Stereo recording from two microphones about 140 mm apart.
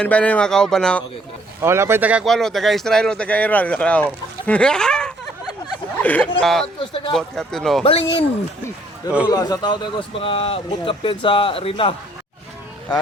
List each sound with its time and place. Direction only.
0.0 s speech: 10° left (ahead or behind)
1.6 s speech: 20° right (ahead or behind)
2.2 s speech: centre (ahead or behind)
6.7 s speech: 40° left (ahead or behind)
7.1 s speech: 5° left (ahead or behind)
9.2 s speech: 30° left (ahead or behind)